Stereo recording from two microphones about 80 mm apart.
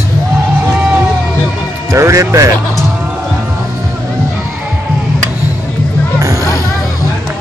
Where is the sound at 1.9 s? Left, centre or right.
Right.